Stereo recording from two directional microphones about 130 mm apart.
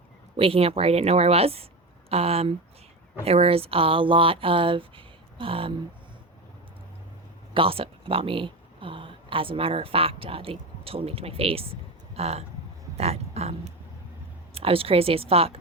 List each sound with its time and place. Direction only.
0.3 s speech: 45° right (ahead or behind)
7.5 s speech: 45° right (ahead or behind)
13.0 s a sound: 55° right (ahead or behind)
14.5 s speech: 45° right (ahead or behind)